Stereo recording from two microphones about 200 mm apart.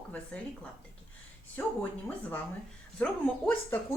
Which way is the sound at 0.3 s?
5° left (ahead or behind).